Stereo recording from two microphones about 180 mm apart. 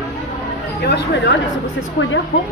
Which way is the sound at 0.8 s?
70° left (ahead or behind).